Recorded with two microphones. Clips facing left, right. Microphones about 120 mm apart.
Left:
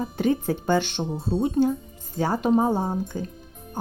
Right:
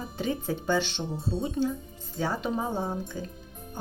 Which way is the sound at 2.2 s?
45° left (ahead or behind).